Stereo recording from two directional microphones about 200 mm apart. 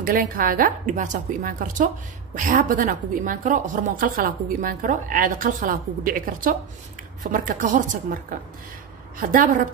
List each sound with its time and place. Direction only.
0.0 s a woman's voice: 45° right (ahead or behind)